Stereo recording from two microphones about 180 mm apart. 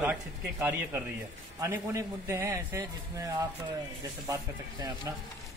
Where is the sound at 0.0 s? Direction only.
10° right (ahead or behind).